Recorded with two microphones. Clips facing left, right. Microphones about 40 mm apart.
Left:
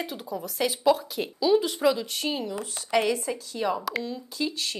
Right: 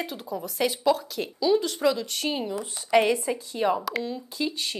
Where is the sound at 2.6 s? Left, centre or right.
Right.